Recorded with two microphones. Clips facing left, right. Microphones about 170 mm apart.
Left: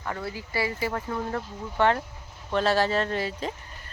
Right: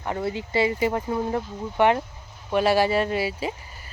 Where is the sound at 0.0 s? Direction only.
20° right (ahead or behind).